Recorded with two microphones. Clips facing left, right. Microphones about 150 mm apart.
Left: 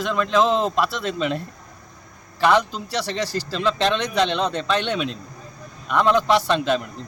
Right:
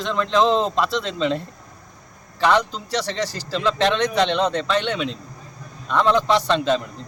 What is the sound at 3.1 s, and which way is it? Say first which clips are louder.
Speech: even; 15° right (ahead or behind).